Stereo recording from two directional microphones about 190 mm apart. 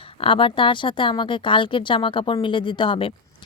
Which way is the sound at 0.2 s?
30° left (ahead or behind).